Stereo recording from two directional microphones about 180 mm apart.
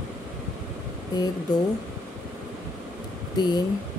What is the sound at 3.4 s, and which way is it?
Speech, 20° left (ahead or behind).